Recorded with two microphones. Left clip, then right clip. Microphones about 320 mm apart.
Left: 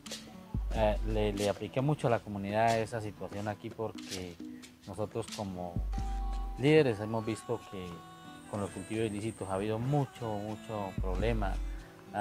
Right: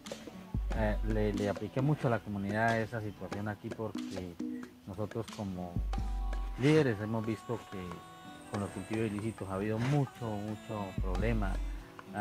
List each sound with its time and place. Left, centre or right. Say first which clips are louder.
0.7 s speech: left 4 dB; left
4.9 s speech: left 3 dB; left
6.6 s speech: left 2 dB; left
8.5 s speech: left 1 dB; left
10.7 s speech: left 2 dB; left